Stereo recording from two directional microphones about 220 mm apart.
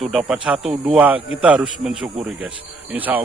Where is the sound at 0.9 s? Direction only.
5° right (ahead or behind).